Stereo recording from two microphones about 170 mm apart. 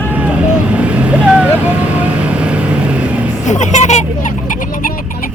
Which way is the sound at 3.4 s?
45° left (ahead or behind).